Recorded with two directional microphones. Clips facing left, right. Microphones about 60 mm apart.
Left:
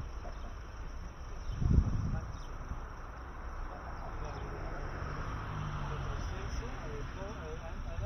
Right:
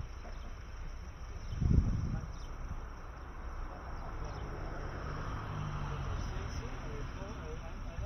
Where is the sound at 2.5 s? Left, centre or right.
Centre.